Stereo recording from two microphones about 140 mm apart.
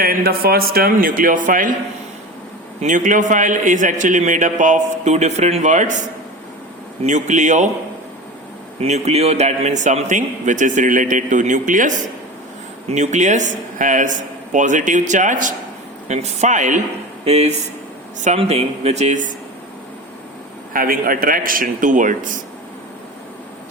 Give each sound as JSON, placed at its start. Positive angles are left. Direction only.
{"t": 0.0, "sound": "a man's voice", "side_deg": -90}
{"t": 2.8, "sound": "a man's voice", "side_deg": -65}
{"t": 8.8, "sound": "a man's voice", "side_deg": -50}
{"t": 16.0, "sound": "a man's voice", "side_deg": -55}
{"t": 17.2, "sound": "speech", "side_deg": -50}
{"t": 20.7, "sound": "a man's voice", "side_deg": -90}